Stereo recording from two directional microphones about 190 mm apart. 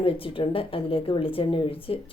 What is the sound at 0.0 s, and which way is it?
A woman's voice, 30° left (ahead or behind).